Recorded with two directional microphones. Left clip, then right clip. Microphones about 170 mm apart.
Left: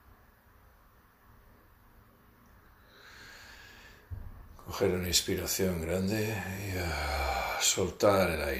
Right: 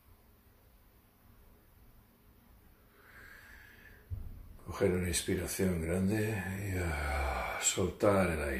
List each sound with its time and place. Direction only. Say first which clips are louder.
4.7 s speech: left 3 dB; 10° right (ahead or behind)